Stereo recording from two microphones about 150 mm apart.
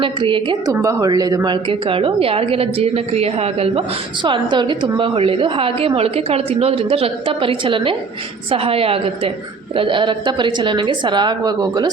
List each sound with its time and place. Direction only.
0.0 s a woman's voice: 35° right (ahead or behind)
0.7 s speech: 20° right (ahead or behind)
1.9 s a woman's voice: 35° right (ahead or behind)